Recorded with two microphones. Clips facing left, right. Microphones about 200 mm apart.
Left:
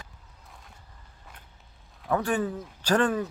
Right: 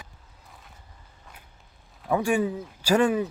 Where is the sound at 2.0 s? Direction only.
10° right (ahead or behind).